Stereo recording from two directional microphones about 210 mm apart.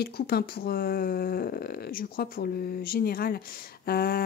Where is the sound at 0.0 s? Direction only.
50° left (ahead or behind).